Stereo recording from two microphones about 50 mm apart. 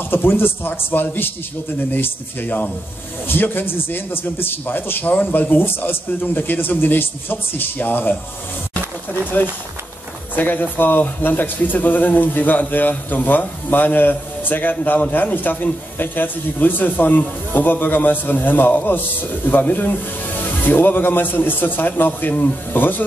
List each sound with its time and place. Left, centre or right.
0.1 s a man's voice: left
9.3 s a man's voice: left